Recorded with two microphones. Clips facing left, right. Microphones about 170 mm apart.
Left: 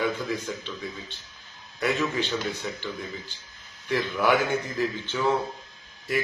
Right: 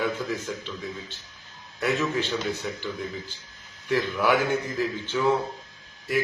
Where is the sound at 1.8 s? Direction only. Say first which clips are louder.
Right 1 dB; centre (ahead or behind).